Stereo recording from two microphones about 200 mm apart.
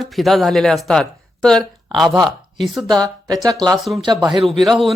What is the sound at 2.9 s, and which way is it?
Speech, 20° right (ahead or behind).